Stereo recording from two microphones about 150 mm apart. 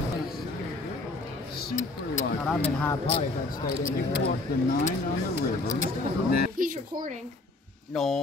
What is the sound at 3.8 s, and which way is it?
Speech, 70° left (ahead or behind).